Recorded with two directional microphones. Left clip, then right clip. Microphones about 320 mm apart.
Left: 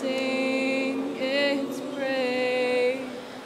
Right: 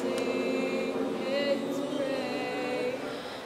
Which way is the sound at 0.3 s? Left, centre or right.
Left.